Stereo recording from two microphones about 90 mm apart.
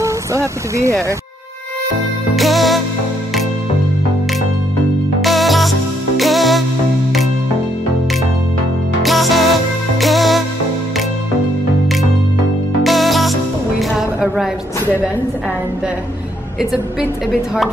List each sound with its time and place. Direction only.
0.0 s speech: 35° right (ahead or behind)
2.3 s music: centre (ahead or behind)
5.2 s music: centre (ahead or behind)
9.0 s music: centre (ahead or behind)
12.8 s music: centre (ahead or behind)